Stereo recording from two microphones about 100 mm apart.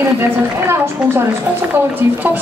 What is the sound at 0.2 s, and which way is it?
A woman's voice, 25° right (ahead or behind).